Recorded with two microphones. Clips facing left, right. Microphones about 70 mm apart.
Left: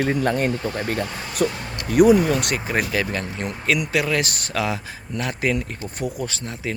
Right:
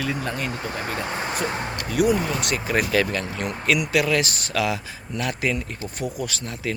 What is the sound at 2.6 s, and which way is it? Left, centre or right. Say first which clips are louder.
Speech: even; left.